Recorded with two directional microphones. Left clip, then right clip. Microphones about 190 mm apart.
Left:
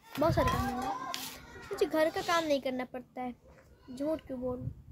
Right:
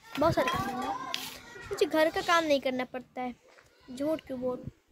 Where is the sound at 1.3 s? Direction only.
5° right (ahead or behind).